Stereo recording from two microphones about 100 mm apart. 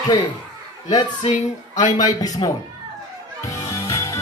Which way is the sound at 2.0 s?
40° left (ahead or behind).